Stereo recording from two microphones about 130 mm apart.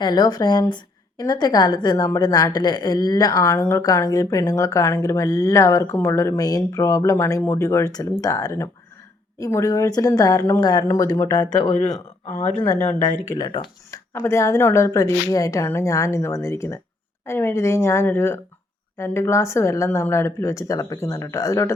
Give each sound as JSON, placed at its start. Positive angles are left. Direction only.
{"t": 0.0, "sound": "a woman's voice", "side_deg": 30}
{"t": 12.7, "sound": "speech", "side_deg": 15}
{"t": 13.4, "sound": "speech", "side_deg": 35}
{"t": 14.2, "sound": "a woman's voice", "side_deg": 20}